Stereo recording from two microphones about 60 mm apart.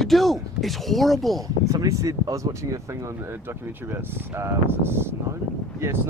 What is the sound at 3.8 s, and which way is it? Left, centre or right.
Speech, right.